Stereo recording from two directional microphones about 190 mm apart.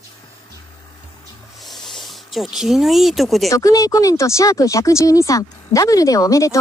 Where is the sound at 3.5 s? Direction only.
15° left (ahead or behind).